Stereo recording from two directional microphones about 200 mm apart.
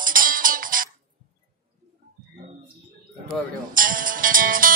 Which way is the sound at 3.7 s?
45° right (ahead or behind).